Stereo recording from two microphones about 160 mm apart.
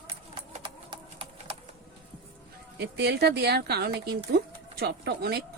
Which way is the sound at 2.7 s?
90° right.